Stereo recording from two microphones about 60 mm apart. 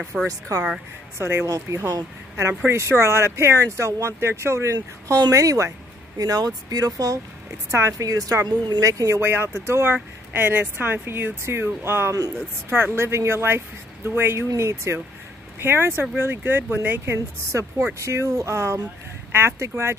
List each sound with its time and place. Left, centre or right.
0.0 s speech: centre
0.3 s speech: right
1.1 s speech: right
1.5 s speech: right
6.1 s speech: right
9.1 s speech: right
10.3 s speech: right
14.6 s speech: right